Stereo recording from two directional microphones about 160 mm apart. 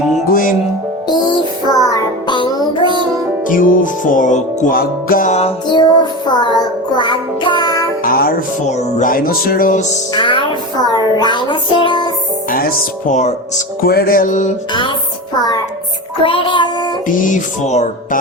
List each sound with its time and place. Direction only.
1.0 s music: 30° left (ahead or behind)
2.8 s music: 30° right (ahead or behind)
3.4 s music: 55° left (ahead or behind)
5.6 s music: 30° left (ahead or behind)
8.0 s music: 65° left (ahead or behind)
8.6 s music: 45° left (ahead or behind)
10.2 s music: 30° left (ahead or behind)
12.5 s music: 60° left (ahead or behind)
14.7 s music: 30° left (ahead or behind)
17.2 s music: 55° left (ahead or behind)